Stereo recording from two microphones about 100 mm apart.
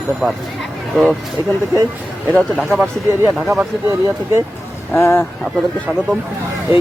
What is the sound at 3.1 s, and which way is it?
Speech, 25° right (ahead or behind).